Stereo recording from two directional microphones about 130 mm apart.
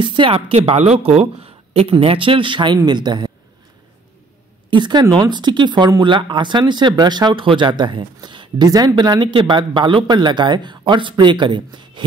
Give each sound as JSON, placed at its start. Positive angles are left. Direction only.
{"t": 0.0, "sound": "speech", "side_deg": -40}
{"t": 4.6, "sound": "speech", "side_deg": -35}